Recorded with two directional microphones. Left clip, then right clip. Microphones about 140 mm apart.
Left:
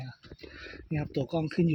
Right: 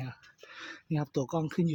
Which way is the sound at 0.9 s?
10° left (ahead or behind).